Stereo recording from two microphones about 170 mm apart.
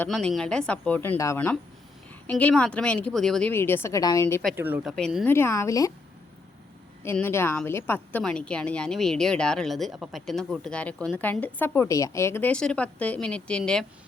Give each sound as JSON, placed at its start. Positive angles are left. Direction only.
{"t": 0.0, "sound": "speech", "side_deg": 5}
{"t": 3.5, "sound": "speech", "side_deg": 15}
{"t": 4.5, "sound": "speech", "side_deg": -10}
{"t": 5.3, "sound": "speech", "side_deg": 15}
{"t": 7.0, "sound": "speech", "side_deg": 15}